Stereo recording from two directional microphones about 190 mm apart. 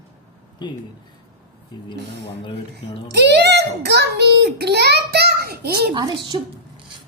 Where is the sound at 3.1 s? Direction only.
60° right (ahead or behind).